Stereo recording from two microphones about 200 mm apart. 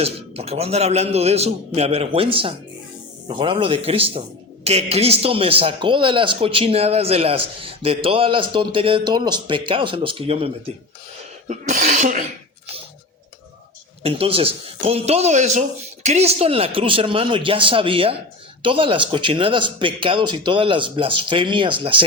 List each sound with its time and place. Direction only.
0.0 s a man's voice: 30° right (ahead or behind)
14.0 s a man's voice: 30° right (ahead or behind)